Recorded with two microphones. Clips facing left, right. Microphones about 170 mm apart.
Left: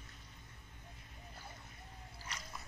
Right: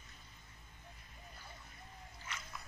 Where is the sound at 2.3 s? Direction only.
40° left (ahead or behind).